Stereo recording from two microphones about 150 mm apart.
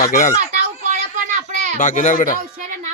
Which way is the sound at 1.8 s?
60° left (ahead or behind).